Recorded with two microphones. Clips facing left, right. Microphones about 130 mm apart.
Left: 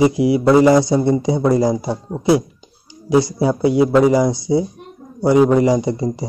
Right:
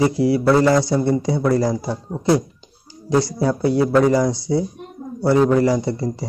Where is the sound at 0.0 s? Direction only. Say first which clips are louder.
Left 3 dB; 15° left (ahead or behind).